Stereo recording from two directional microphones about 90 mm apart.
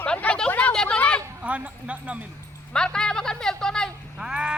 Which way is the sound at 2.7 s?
5° left (ahead or behind).